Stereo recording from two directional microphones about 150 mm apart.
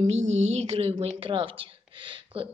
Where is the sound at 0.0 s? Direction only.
45° right (ahead or behind).